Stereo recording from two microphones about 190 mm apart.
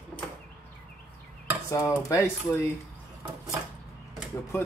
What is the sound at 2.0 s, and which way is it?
Speech, 15° left (ahead or behind).